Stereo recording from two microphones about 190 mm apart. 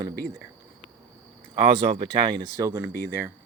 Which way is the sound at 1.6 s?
30° right (ahead or behind).